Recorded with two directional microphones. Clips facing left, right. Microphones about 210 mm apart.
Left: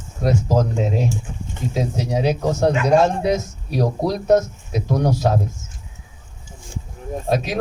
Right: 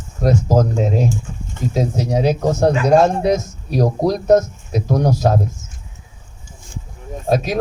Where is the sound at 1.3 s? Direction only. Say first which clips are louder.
Right 1 dB; 15° left (ahead or behind).